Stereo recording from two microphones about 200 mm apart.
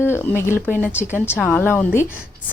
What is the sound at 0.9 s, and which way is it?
Speech, 10° right (ahead or behind).